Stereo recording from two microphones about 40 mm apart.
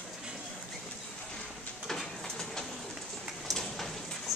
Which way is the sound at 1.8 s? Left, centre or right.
Centre.